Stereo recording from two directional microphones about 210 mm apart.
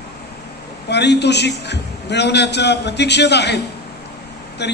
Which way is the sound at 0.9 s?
55° left (ahead or behind).